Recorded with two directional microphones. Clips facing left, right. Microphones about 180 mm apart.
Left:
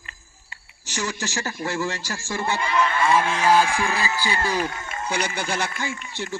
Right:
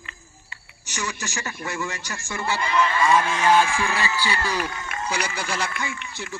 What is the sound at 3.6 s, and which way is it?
Speech, 45° left (ahead or behind).